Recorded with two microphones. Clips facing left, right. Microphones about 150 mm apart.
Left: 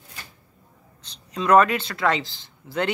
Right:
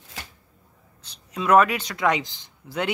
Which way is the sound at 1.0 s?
10° right (ahead or behind).